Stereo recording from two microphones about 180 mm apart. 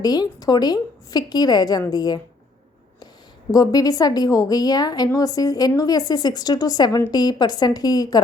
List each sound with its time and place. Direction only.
0.0 s a woman's voice: 20° left (ahead or behind)
3.5 s a woman's voice: 20° left (ahead or behind)